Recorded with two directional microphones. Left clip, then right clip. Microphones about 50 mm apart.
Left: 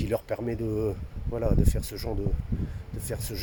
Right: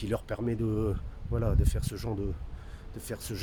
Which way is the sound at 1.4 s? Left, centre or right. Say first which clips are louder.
Left 5 dB; centre.